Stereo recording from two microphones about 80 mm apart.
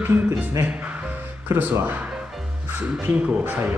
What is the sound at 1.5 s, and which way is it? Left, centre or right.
Speech, right.